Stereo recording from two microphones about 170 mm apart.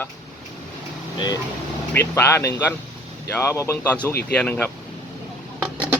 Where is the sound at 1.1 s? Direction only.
25° left (ahead or behind).